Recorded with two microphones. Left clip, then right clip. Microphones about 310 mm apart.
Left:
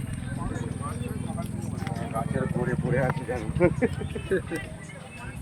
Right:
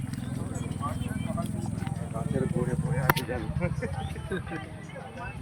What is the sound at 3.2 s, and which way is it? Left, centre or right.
Speech, left.